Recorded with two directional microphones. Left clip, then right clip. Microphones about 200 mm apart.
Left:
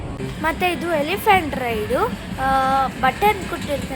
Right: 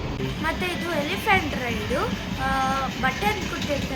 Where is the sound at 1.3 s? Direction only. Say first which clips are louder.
Left 6 dB; 25° left (ahead or behind).